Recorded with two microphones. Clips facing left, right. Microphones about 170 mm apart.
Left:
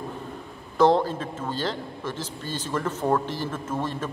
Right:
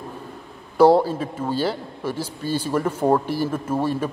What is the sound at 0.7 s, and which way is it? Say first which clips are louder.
A man's voice: right 5 dB; 10° right (ahead or behind).